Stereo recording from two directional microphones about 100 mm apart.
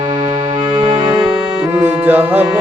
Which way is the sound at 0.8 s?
60° right (ahead or behind).